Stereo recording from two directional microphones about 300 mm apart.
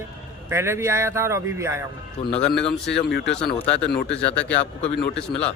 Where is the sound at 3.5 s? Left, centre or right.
Centre.